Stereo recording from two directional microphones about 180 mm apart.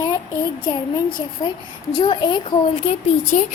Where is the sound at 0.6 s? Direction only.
25° left (ahead or behind).